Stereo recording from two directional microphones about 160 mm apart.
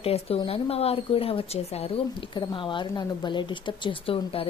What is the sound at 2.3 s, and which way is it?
Speech, 30° left (ahead or behind).